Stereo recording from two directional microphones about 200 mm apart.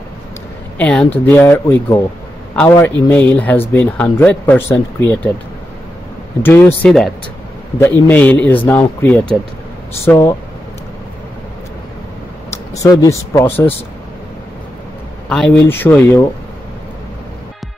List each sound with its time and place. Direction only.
0.7 s speech: 5° left (ahead or behind)
6.4 s speech: 10° left (ahead or behind)
12.8 s speech: 15° left (ahead or behind)
15.2 s speech: 5° left (ahead or behind)